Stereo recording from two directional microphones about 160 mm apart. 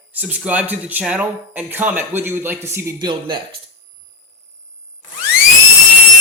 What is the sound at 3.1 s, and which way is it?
Speech, 30° right (ahead or behind).